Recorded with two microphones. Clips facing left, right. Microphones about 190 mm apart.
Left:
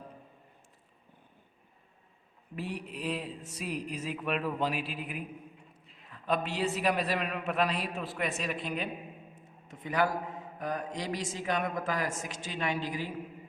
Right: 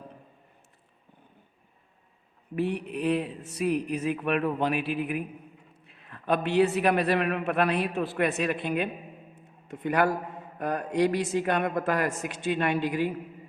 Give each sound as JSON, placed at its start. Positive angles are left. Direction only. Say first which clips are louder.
{"t": 2.6, "sound": "speech", "louder": "right 9 dB", "side_deg": -60}